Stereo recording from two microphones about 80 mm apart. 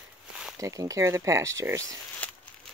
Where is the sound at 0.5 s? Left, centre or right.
Right.